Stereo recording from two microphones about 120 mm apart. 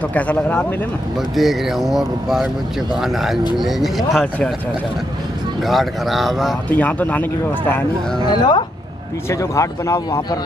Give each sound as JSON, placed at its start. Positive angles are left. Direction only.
{"t": 0.1, "sound": "speech", "side_deg": 15}
{"t": 1.3, "sound": "speech", "side_deg": 0}
{"t": 5.7, "sound": "speech", "side_deg": 0}
{"t": 6.7, "sound": "speech", "side_deg": 15}
{"t": 8.3, "sound": "speech", "side_deg": 35}
{"t": 9.3, "sound": "speech", "side_deg": 25}